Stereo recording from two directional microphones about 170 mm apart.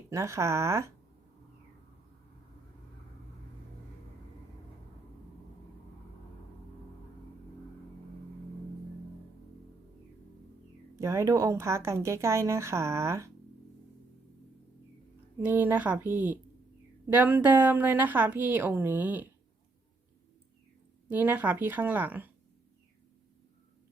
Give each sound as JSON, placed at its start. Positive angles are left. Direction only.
{"t": 0.1, "sound": "speech", "side_deg": -15}
{"t": 10.9, "sound": "speech", "side_deg": -15}
{"t": 15.4, "sound": "speech", "side_deg": -10}
{"t": 21.1, "sound": "speech", "side_deg": -10}